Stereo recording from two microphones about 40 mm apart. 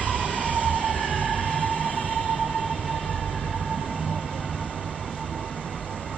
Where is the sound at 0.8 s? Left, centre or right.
Right.